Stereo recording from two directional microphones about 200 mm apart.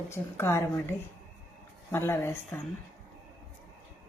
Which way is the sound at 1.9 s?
10° left (ahead or behind).